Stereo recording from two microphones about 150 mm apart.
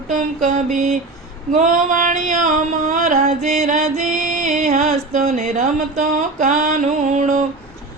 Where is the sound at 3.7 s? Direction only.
60° right (ahead or behind).